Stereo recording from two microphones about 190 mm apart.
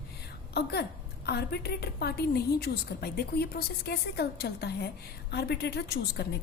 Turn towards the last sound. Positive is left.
turn(degrees=60)  # may be behind; listen again after turning